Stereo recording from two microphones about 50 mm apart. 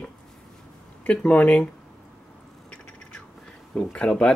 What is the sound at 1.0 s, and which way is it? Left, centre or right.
Speech, left.